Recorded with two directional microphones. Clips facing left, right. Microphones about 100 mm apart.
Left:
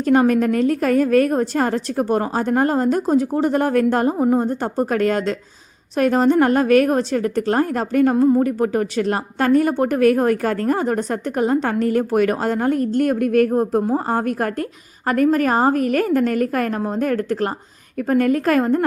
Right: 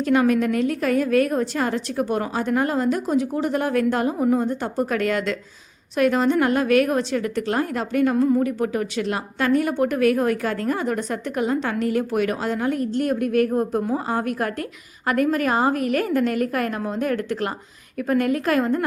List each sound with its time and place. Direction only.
0.0 s a woman's voice: 40° left (ahead or behind)
8.1 s speech: 30° left (ahead or behind)
8.4 s a woman's voice: 40° left (ahead or behind)
13.5 s a woman's voice: 35° left (ahead or behind)